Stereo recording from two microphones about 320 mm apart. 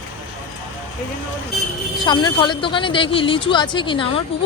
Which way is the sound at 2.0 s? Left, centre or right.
Centre.